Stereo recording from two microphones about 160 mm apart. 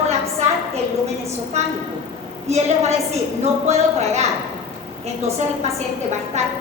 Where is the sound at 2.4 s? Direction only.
45° right (ahead or behind).